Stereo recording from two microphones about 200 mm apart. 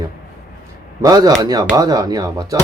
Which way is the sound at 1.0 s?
20° right (ahead or behind).